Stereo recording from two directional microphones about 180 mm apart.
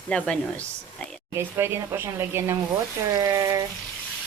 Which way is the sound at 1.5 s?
15° right (ahead or behind).